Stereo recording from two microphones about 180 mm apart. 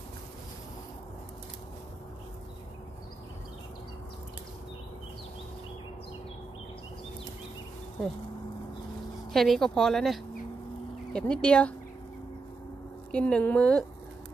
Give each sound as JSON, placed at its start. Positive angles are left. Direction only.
{"t": 9.3, "sound": "speech", "side_deg": 0}
{"t": 13.1, "sound": "speech", "side_deg": 5}